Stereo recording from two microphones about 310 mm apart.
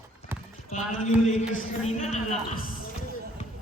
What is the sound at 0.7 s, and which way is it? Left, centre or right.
A man's voice, left.